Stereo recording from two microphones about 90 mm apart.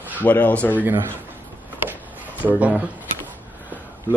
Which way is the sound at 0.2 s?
20° left (ahead or behind).